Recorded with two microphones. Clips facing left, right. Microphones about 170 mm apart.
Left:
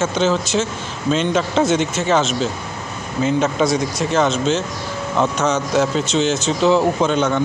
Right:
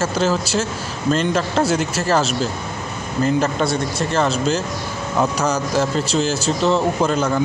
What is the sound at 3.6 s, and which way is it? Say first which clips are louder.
Speech: left 3 dB; centre (ahead or behind).